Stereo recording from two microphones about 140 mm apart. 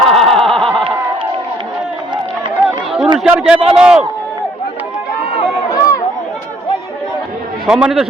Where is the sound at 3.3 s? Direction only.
5° right (ahead or behind).